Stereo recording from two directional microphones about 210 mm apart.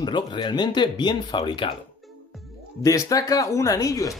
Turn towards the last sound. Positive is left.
turn(degrees=15)  # may be behind; listen again after turning